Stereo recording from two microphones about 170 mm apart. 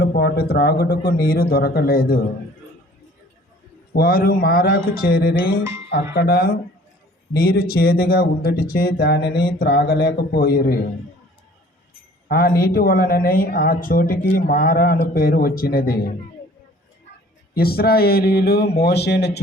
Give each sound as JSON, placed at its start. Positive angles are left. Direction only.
{"t": 0.0, "sound": "speech", "side_deg": 70}
{"t": 3.9, "sound": "a woman's voice", "side_deg": 60}
{"t": 12.3, "sound": "a woman's voice", "side_deg": 60}
{"t": 17.5, "sound": "a woman's voice", "side_deg": 65}